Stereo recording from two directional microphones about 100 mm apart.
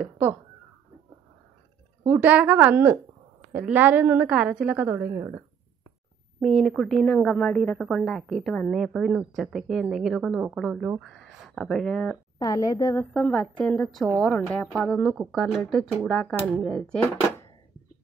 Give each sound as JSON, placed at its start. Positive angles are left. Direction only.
{"t": 2.0, "sound": "a woman's voice", "side_deg": -20}
{"t": 6.4, "sound": "speech", "side_deg": 5}
{"t": 12.4, "sound": "a woman's voice", "side_deg": 35}
{"t": 13.1, "sound": "a woman's voice", "side_deg": 10}
{"t": 16.6, "sound": "a woman's voice", "side_deg": 10}